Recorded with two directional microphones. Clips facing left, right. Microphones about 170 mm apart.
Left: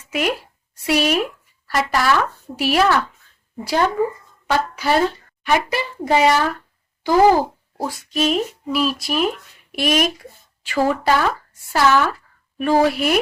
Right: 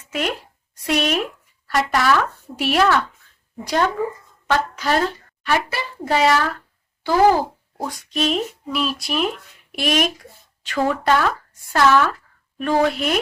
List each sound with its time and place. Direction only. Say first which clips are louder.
0.1 s a child's voice: left 3 dB; 10° left (ahead or behind)
7.8 s a child's voice: left 2 dB; 5° left (ahead or behind)